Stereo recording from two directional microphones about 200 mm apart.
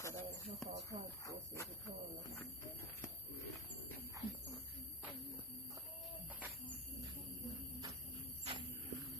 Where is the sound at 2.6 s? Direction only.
10° left (ahead or behind).